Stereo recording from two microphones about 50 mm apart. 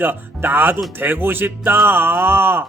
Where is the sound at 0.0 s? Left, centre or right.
Right.